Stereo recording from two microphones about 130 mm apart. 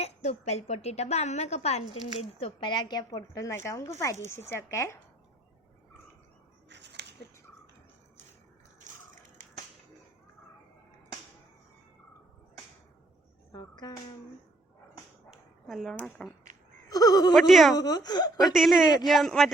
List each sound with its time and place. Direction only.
0.0 s a woman's voice: 55° left (ahead or behind)
2.1 s a woman's voice: 45° left (ahead or behind); by 4.9 s 20° left (ahead or behind)
8.9 s a sound: 80° right
13.5 s speech: 30° left (ahead or behind)
15.3 s dog: centre (ahead or behind)
16.0 s speech: centre (ahead or behind)
16.9 s speech: 30° left (ahead or behind)
17.3 s speech: centre (ahead or behind)
17.7 s speech: 30° left (ahead or behind)
18.3 s speech: centre (ahead or behind)